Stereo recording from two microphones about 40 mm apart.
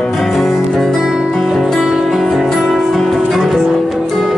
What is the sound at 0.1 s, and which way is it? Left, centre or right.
Music, centre.